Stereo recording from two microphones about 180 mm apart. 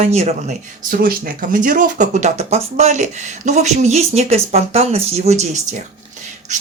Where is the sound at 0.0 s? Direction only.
35° right (ahead or behind).